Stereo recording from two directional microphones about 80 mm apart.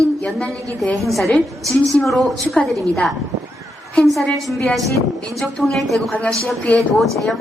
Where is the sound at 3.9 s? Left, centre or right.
Centre.